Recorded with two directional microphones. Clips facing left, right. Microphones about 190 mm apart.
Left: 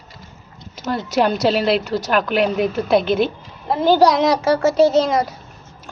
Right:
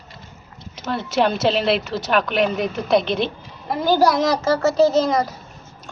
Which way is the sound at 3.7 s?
25° left (ahead or behind).